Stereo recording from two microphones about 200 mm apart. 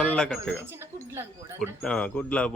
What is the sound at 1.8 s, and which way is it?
Speech, 5° left (ahead or behind).